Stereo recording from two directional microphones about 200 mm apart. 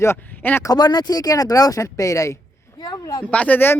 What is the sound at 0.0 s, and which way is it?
Speech, 10° left (ahead or behind).